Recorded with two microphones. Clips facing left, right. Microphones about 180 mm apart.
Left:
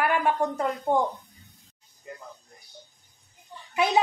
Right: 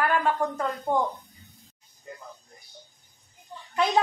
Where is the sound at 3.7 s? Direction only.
10° left (ahead or behind).